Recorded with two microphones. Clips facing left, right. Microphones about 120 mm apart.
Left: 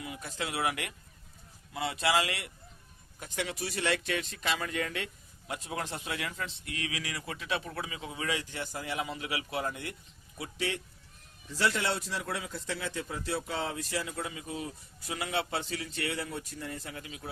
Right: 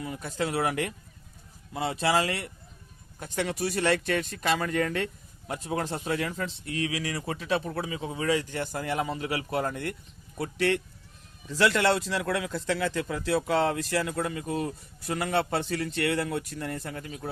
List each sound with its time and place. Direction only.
0.0 s speech: 45° right (ahead or behind)
10.3 s speech: 60° right (ahead or behind)
11.4 s a man's voice: 90° right; by 17.2 s 45° right (ahead or behind)